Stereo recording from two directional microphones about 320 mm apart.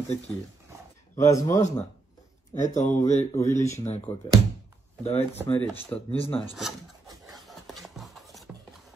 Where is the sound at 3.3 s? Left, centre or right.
Centre.